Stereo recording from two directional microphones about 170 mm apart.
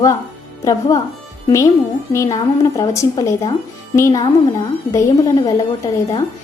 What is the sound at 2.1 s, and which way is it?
Speech, 20° left (ahead or behind).